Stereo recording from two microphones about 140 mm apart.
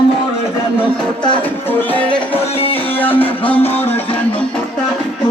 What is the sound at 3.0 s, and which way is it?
Music, 15° left (ahead or behind).